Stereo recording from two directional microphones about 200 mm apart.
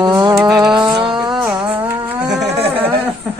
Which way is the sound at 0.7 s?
25° right (ahead or behind).